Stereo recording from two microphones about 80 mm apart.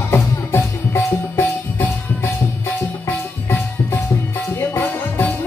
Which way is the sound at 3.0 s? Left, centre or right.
Left.